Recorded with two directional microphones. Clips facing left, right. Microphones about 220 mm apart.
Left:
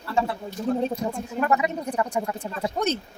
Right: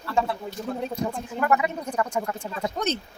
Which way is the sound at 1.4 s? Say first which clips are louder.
Even; 20° left (ahead or behind).